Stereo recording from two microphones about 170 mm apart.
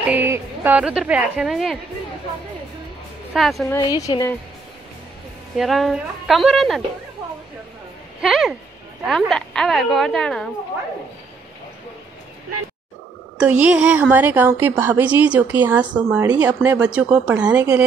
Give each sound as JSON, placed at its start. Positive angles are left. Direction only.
{"t": 0.1, "sound": "a woman's voice", "side_deg": -10}
{"t": 3.3, "sound": "a woman's voice", "side_deg": 0}
{"t": 4.0, "sound": "a woman's voice", "side_deg": 20}
{"t": 5.6, "sound": "a woman's voice", "side_deg": 0}
{"t": 8.2, "sound": "a woman's voice", "side_deg": -5}
{"t": 13.4, "sound": "a woman's voice", "side_deg": -5}